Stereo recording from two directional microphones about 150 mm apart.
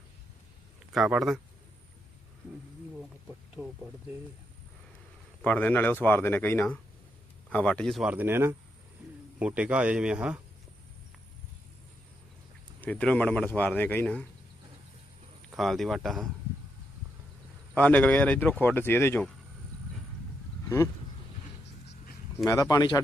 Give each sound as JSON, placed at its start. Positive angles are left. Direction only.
{"t": 0.9, "sound": "speech", "side_deg": 0}
{"t": 3.2, "sound": "speech", "side_deg": -5}
{"t": 5.4, "sound": "speech", "side_deg": 10}
{"t": 8.1, "sound": "a man's voice", "side_deg": -15}
{"t": 12.8, "sound": "speech", "side_deg": 10}
{"t": 15.5, "sound": "speech", "side_deg": 0}
{"t": 17.7, "sound": "speech", "side_deg": 10}
{"t": 20.7, "sound": "speech", "side_deg": 15}
{"t": 22.4, "sound": "speech", "side_deg": 20}